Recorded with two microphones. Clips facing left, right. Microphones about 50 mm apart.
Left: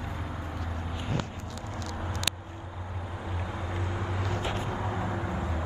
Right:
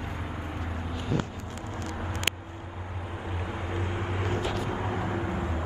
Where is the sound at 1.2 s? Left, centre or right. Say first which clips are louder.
Right 2 dB; right.